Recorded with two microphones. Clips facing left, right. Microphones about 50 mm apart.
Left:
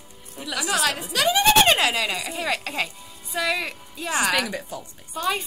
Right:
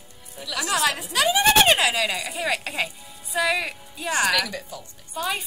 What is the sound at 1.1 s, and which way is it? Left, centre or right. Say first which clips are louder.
A woman's voice: left 1 dB; centre.